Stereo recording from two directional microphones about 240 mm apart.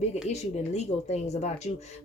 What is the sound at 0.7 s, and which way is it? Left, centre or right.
Speech, left.